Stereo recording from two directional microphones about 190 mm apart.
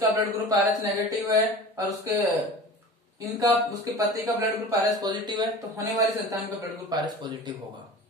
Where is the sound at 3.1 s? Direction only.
20° right (ahead or behind).